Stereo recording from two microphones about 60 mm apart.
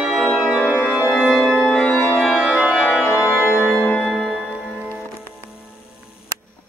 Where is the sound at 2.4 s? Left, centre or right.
Centre.